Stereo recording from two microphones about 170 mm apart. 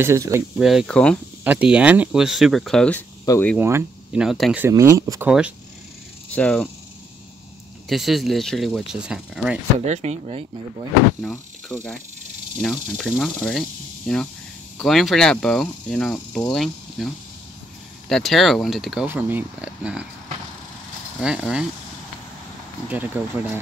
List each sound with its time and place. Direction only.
0.0 s speech: 15° right (ahead or behind)
0.6 s speech: centre (ahead or behind)
1.4 s speech: 10° right (ahead or behind); by 3.5 s 15° left (ahead or behind)
3.5 s speech: 10° right (ahead or behind)
4.6 s speech: 15° right (ahead or behind)
6.3 s speech: 5° left (ahead or behind)
7.9 s speech: centre (ahead or behind)
9.8 s speech: 40° right (ahead or behind)
11.1 s speech: 5° left (ahead or behind)
19.0 s speech: 10° right (ahead or behind)
22.8 s speech: 10° right (ahead or behind)